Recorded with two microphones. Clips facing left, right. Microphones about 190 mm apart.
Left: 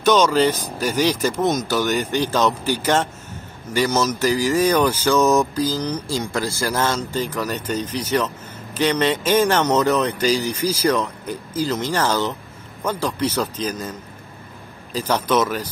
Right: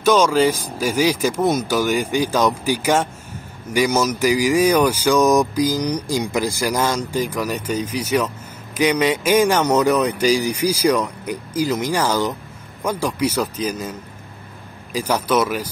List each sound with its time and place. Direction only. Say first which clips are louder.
0.0 s speech: right 1 dB; 10° right (ahead or behind)